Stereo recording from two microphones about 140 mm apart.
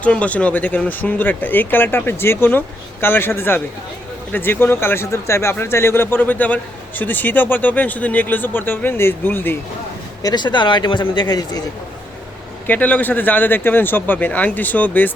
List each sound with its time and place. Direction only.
0.0 s speech: 10° left (ahead or behind)
10.2 s speech: 30° left (ahead or behind)
12.6 s speech: 10° left (ahead or behind)